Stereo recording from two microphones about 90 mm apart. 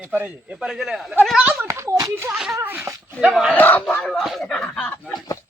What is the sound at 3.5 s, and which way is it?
Speech, 20° left (ahead or behind).